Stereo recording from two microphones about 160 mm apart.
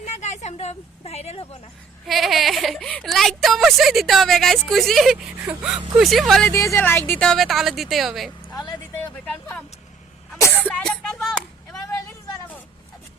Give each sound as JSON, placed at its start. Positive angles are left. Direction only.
{"t": 0.0, "sound": "a woman's voice", "side_deg": 45}
{"t": 2.0, "sound": "speech", "side_deg": 0}
{"t": 6.5, "sound": "speech", "side_deg": 20}
{"t": 10.3, "sound": "a sound", "side_deg": 15}